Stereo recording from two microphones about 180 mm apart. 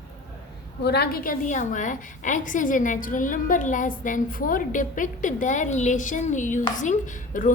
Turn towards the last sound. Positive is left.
turn(degrees=45)  # may be behind; listen again after turning